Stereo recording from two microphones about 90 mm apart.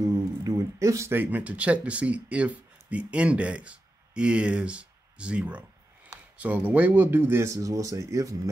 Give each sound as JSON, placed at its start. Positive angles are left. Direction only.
{"t": 0.4, "sound": "a sound", "side_deg": -35}
{"t": 1.1, "sound": "speech", "side_deg": -20}
{"t": 7.5, "sound": "speech", "side_deg": -40}